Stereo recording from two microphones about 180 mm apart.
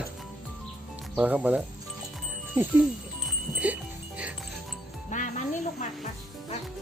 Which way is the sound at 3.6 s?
10° right (ahead or behind).